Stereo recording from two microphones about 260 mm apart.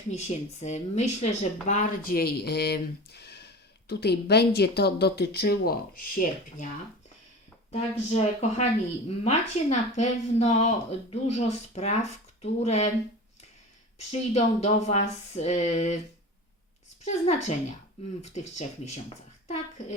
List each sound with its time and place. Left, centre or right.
0.1 s speech: left
7.7 s speech: left
14.1 s speech: left
17.1 s speech: left